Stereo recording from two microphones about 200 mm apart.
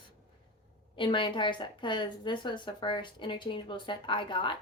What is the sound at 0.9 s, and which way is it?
A woman's voice, 25° left (ahead or behind).